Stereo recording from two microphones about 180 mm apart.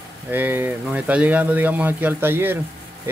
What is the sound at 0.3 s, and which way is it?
Speech, 10° right (ahead or behind).